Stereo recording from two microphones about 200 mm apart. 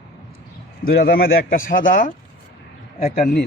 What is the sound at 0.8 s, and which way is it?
Speech, 50° left (ahead or behind).